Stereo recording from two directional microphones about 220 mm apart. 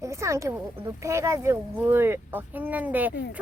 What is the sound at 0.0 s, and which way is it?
Speech, 15° right (ahead or behind).